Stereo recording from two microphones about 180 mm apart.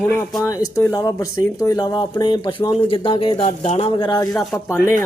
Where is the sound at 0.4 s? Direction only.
15° left (ahead or behind).